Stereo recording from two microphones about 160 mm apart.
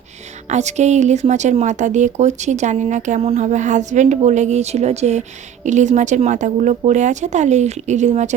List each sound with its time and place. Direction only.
0.4 s speech: 45° right (ahead or behind)